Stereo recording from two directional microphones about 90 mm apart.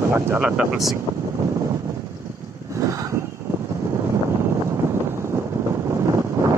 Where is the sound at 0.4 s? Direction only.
15° right (ahead or behind).